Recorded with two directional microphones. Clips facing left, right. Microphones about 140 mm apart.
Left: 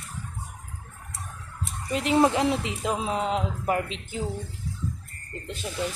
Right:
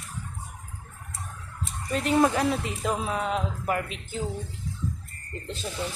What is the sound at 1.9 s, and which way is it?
Speech, 20° left (ahead or behind).